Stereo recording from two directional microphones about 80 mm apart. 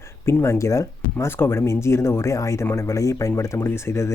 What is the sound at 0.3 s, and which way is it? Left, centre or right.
Speech, left.